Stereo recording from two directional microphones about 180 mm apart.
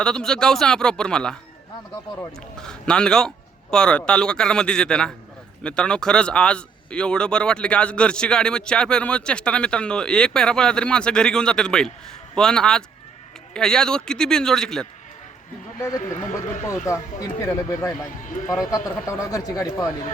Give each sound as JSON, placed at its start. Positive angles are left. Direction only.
{"t": 0.0, "sound": "speech", "side_deg": 5}
{"t": 2.6, "sound": "speech", "side_deg": 5}
{"t": 16.0, "sound": "speech", "side_deg": 45}
{"t": 17.4, "sound": "speech", "side_deg": 20}
{"t": 19.0, "sound": "speech", "side_deg": 20}